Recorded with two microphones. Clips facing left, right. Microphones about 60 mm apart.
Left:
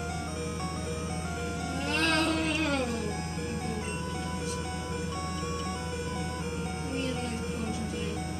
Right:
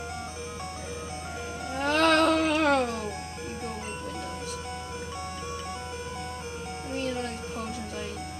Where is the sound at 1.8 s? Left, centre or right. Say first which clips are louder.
Right 7 dB; right.